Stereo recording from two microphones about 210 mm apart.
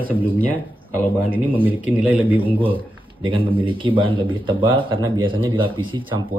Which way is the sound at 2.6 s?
25° right (ahead or behind).